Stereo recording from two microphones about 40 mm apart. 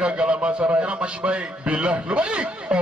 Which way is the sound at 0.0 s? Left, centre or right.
Right.